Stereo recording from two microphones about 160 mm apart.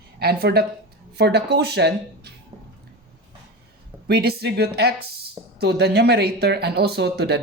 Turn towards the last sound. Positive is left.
turn(degrees=-90)